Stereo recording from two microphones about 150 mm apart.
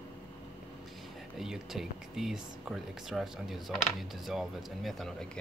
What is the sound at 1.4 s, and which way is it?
Speech, centre (ahead or behind).